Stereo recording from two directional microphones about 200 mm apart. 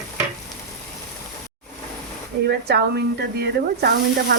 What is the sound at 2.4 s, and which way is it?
Speech, 55° right (ahead or behind).